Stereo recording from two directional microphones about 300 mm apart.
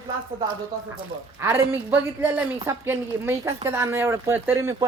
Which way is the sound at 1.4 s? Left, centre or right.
Centre.